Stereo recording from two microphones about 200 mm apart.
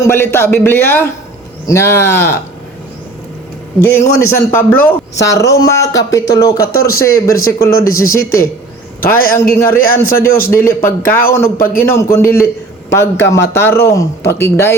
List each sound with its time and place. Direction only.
0.0 s a man's voice: 10° left (ahead or behind)
3.8 s a man's voice: 10° left (ahead or behind)
9.0 s a man's voice: 45° left (ahead or behind)
9.3 s a man's voice: 10° left (ahead or behind)
9.7 s a man's voice: 45° left (ahead or behind)
10.5 s a man's voice: 10° left (ahead or behind)